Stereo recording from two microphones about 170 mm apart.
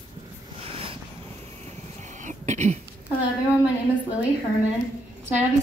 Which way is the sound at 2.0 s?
45° right (ahead or behind).